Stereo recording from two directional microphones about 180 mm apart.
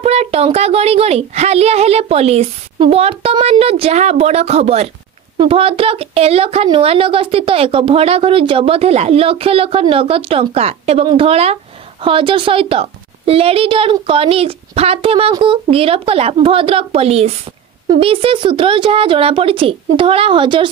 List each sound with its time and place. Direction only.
0.0 s a woman's voice: 35° right (ahead or behind)